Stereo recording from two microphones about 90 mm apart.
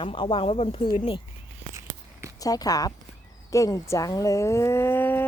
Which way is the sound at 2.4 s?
45° left (ahead or behind).